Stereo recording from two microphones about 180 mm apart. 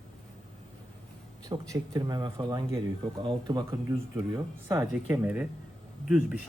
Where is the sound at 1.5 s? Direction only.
20° right (ahead or behind).